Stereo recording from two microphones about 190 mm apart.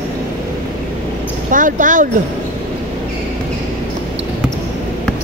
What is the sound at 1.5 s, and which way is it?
Speech, 45° right (ahead or behind).